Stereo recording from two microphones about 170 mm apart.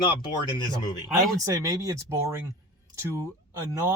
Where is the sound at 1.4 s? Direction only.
20° right (ahead or behind).